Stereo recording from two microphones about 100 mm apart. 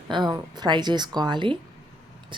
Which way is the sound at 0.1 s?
45° right (ahead or behind).